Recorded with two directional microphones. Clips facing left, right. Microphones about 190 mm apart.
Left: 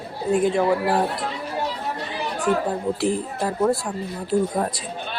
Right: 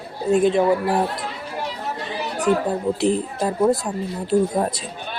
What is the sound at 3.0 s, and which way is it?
Speech, 20° right (ahead or behind).